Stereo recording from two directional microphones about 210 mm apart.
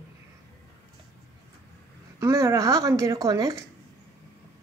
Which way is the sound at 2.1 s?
15° right (ahead or behind).